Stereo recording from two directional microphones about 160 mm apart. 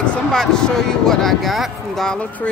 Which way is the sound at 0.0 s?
5° left (ahead or behind).